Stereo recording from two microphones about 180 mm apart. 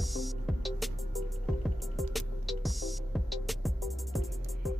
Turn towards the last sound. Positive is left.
turn(degrees=0)  # may be behind; listen again after turning